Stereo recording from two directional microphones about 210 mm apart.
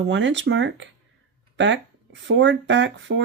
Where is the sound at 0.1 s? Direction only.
60° right (ahead or behind).